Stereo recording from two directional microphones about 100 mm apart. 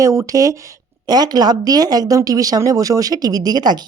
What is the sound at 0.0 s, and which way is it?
Speech, 30° right (ahead or behind).